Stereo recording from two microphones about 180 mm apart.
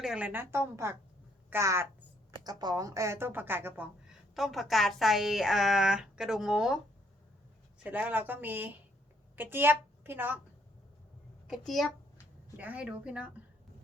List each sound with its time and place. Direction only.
0.0 s a woman's voice: 5° right (ahead or behind)
4.4 s a woman's voice: centre (ahead or behind)
7.9 s a woman's voice: 10° right (ahead or behind)
11.4 s a child's voice: centre (ahead or behind)